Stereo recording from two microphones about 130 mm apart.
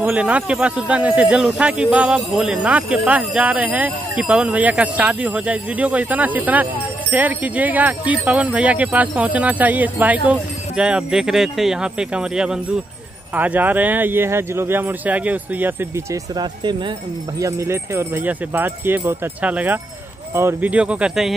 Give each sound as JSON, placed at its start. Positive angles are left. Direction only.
{"t": 0.0, "sound": "speech", "side_deg": -10}
{"t": 16.3, "sound": "speech", "side_deg": -35}
{"t": 17.4, "sound": "speech", "side_deg": -20}